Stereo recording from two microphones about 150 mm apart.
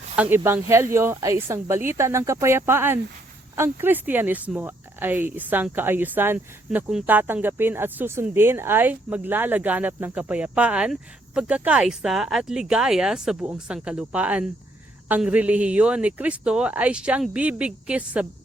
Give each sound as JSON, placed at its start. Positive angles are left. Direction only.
{"t": 0.2, "sound": "speech", "side_deg": -15}